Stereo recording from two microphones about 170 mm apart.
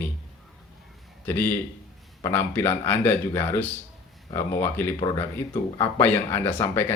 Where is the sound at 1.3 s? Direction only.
10° left (ahead or behind).